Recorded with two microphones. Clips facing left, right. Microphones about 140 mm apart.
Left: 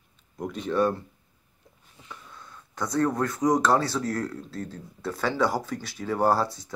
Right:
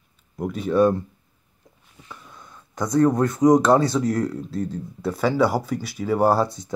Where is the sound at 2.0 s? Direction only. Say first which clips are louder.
Right 2 dB; 15° right (ahead or behind).